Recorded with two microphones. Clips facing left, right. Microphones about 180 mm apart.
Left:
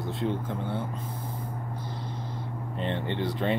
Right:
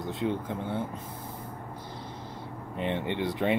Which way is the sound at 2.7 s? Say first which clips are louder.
Right 1 dB; 10° right (ahead or behind).